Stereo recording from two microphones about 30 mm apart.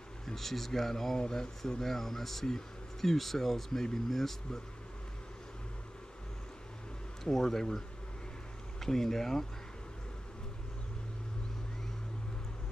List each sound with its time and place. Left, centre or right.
0.2 s speech: centre
1.1 s speech: left
1.7 s speech: centre
7.2 s speech: centre
8.8 s speech: centre